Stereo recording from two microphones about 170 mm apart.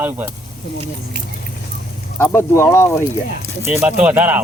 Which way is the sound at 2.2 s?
15° left (ahead or behind).